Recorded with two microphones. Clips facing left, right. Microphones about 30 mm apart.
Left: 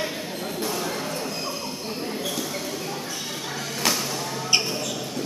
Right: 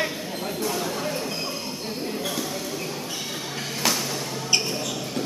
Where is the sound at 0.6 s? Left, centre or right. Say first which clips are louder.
Right 1 dB; centre.